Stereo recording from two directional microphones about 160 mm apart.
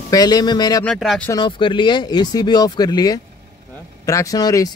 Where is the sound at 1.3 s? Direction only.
30° left (ahead or behind).